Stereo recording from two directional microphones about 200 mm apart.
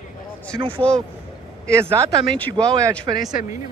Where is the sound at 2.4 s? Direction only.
10° left (ahead or behind).